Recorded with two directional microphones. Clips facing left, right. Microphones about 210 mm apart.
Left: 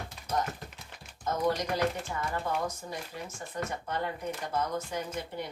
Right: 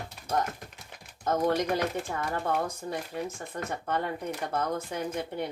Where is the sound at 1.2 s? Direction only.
60° right (ahead or behind).